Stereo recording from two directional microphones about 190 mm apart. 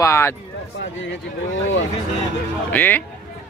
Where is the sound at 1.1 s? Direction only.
80° left.